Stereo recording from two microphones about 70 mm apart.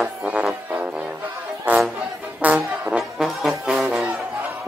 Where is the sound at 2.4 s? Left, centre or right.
Right.